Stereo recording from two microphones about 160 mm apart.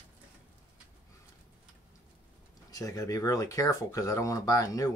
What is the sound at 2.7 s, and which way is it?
Speech, 20° left (ahead or behind).